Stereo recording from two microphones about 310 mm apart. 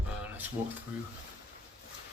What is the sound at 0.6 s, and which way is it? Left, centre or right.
Speech, centre.